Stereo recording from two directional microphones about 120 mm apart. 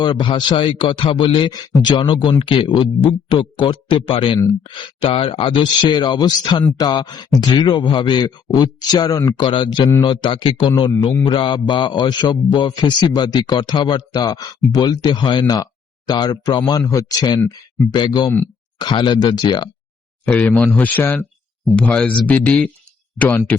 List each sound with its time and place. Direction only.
0.0 s a man's voice: 40° left (ahead or behind)
9.4 s a man's voice: 45° left (ahead or behind)
20.2 s speech: 15° left (ahead or behind)